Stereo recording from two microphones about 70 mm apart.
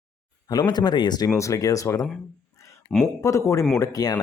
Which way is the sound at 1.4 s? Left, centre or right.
Left.